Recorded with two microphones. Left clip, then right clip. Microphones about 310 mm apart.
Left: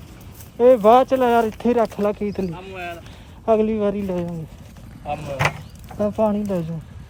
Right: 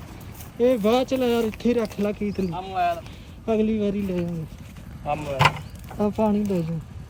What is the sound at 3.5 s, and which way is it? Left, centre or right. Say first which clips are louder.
Speech: left 5 dB; centre.